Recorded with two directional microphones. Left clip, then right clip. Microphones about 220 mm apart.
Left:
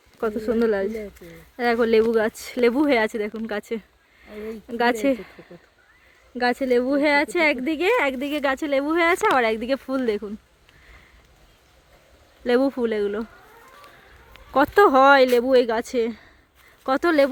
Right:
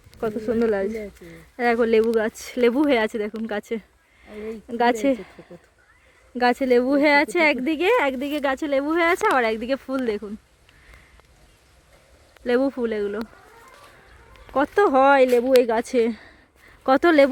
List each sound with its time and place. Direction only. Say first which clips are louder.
0.2 s speech: left 1 dB; 5° left (ahead or behind)
12.5 s speech: left 1 dB; 15° left (ahead or behind)
14.5 s speech: left 3 dB; 10° left (ahead or behind); by 17.2 s 15° right (ahead or behind)